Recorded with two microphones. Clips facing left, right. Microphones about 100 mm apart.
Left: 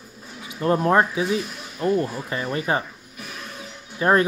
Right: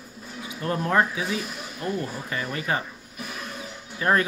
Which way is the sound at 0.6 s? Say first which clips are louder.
Left 5 dB; 30° left (ahead or behind).